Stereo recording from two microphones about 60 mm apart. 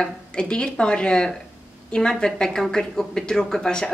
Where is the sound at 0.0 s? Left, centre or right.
Centre.